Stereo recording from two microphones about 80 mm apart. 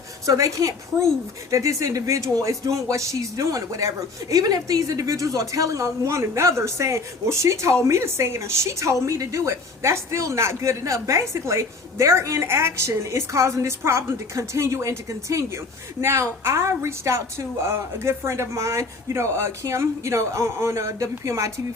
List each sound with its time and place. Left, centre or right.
0.3 s a woman's voice: right